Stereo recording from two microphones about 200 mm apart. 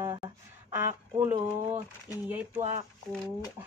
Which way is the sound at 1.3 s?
35° right (ahead or behind).